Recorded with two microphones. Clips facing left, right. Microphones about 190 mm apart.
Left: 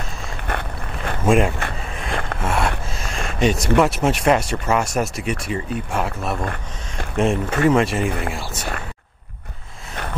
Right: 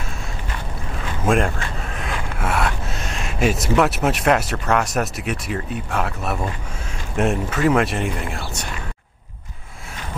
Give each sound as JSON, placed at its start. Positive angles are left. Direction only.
{"t": 0.5, "sound": "a sound", "side_deg": 60}
{"t": 1.2, "sound": "a man's voice", "side_deg": 0}
{"t": 2.4, "sound": "gasp", "side_deg": 0}
{"t": 2.9, "sound": "speech", "side_deg": 0}
{"t": 6.4, "sound": "speech", "side_deg": 60}
{"t": 7.2, "sound": "speech", "side_deg": 0}